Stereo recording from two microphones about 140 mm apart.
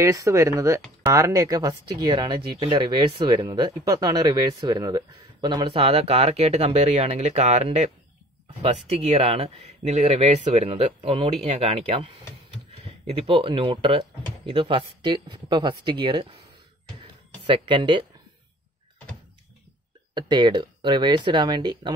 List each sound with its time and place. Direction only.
0.0 s speech: 20° right (ahead or behind); by 12.1 s 50° right (ahead or behind)
13.1 s speech: 40° right (ahead or behind)
17.5 s speech: 35° right (ahead or behind)
20.2 s speech: 35° right (ahead or behind)